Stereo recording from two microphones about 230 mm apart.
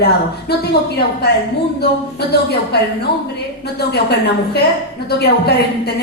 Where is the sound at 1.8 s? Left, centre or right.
Left.